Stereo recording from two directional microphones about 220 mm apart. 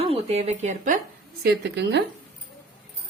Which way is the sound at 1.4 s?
50° right (ahead or behind).